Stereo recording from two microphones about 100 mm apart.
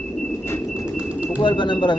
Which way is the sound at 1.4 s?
50° left (ahead or behind).